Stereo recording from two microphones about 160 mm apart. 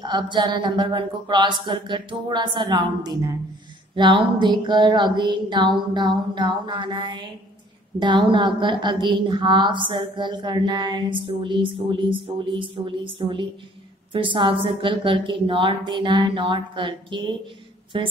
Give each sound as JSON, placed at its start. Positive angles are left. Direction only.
{"t": 0.0, "sound": "a woman's voice", "side_deg": -25}